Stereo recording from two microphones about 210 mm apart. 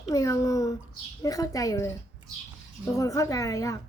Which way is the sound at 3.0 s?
15° left (ahead or behind).